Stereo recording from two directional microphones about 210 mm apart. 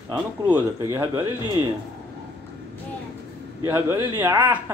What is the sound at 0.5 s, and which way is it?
Speech, 15° right (ahead or behind).